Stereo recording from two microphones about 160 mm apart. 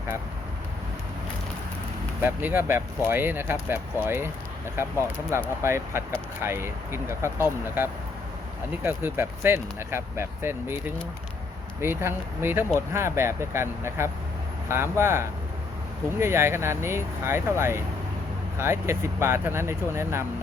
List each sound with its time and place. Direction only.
2.2 s speech: 10° right (ahead or behind)
11.8 s speech: 15° right (ahead or behind)